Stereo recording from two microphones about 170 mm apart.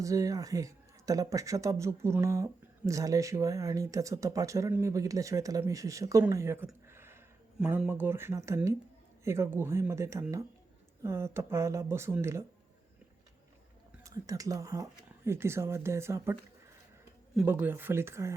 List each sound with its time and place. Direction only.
0.0 s speech: 20° right (ahead or behind)
6.8 s a sound: 15° right (ahead or behind)
7.6 s speech: 10° right (ahead or behind)
14.0 s speech: 20° right (ahead or behind)
17.3 s speech: 10° right (ahead or behind)